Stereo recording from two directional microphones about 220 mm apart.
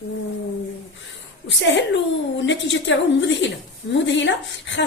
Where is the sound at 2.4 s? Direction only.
55° left (ahead or behind).